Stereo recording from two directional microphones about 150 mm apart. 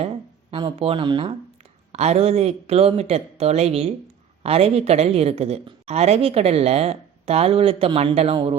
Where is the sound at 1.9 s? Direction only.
45° right (ahead or behind).